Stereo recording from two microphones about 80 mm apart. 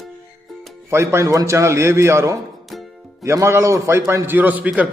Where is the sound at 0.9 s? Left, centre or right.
Right.